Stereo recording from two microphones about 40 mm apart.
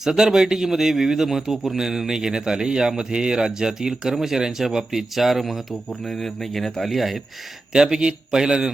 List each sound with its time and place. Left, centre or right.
0.0 s a man's voice: centre
7.7 s a man's voice: centre